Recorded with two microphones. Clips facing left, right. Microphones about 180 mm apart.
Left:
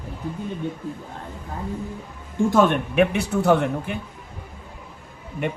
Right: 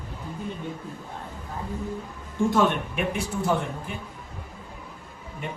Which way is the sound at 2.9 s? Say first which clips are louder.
Left 8 dB; 70° left (ahead or behind).